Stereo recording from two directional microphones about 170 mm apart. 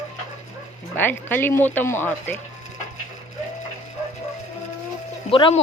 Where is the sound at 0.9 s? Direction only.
10° left (ahead or behind).